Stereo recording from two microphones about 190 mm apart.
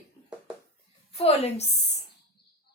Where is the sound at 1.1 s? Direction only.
30° left (ahead or behind).